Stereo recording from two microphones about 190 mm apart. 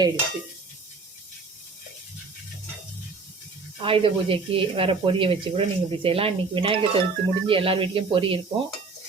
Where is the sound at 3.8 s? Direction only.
30° right (ahead or behind).